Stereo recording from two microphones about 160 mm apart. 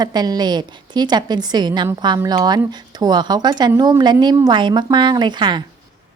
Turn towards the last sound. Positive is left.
turn(degrees=-30)  # may be behind; listen again after turning